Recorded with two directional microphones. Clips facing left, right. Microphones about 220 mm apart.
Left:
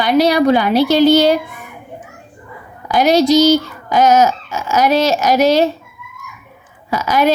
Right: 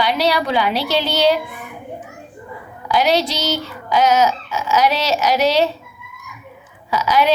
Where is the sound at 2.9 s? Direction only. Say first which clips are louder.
Left 6 dB; 45° left (ahead or behind).